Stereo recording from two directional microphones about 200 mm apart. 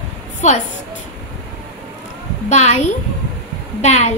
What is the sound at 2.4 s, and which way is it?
Speech, 35° left (ahead or behind).